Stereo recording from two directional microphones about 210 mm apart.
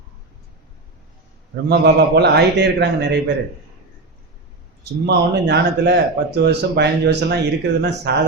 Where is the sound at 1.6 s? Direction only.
50° right (ahead or behind).